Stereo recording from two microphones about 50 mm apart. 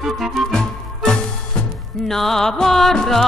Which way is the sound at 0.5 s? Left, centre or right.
Centre.